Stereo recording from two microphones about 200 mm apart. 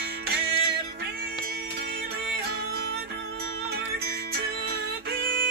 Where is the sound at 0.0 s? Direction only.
55° right (ahead or behind).